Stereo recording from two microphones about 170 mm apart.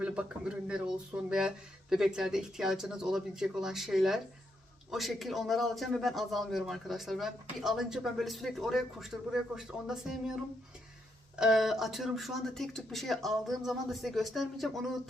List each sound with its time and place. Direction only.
0.0 s a man's voice: 5° right (ahead or behind)
11.3 s a man's voice: 5° right (ahead or behind)